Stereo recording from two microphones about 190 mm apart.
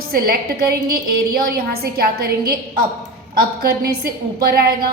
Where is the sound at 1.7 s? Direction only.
55° right (ahead or behind).